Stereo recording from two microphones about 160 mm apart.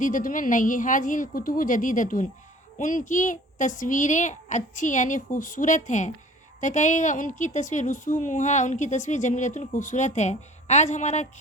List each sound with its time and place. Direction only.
0.0 s a woman's voice: 55° left (ahead or behind)